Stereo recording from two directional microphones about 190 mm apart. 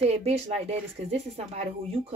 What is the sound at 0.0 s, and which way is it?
Speech, 30° right (ahead or behind).